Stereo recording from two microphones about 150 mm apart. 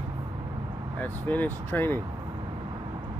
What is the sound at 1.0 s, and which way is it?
Speech, 10° left (ahead or behind).